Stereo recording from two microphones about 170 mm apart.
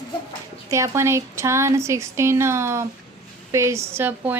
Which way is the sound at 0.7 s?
15° right (ahead or behind).